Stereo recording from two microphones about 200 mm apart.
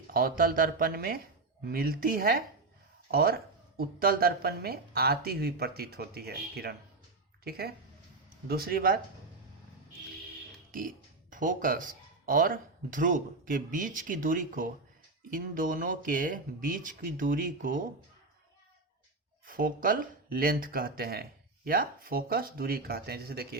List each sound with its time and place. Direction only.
0.1 s speech: 45° right (ahead or behind)
10.7 s speech: 45° right (ahead or behind)
19.5 s speech: 45° right (ahead or behind)